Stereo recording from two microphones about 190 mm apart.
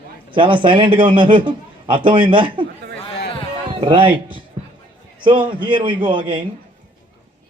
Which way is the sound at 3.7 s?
25° right (ahead or behind).